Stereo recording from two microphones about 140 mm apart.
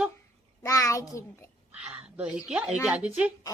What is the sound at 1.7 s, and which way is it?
Speech, 10° right (ahead or behind).